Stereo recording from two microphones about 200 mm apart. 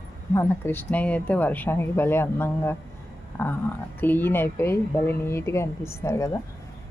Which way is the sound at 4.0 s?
10° left (ahead or behind).